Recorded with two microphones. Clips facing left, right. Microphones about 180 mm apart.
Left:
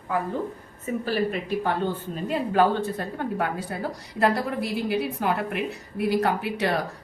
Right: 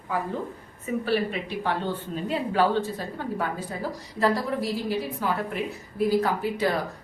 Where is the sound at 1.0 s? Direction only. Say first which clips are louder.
Even; 45° left (ahead or behind).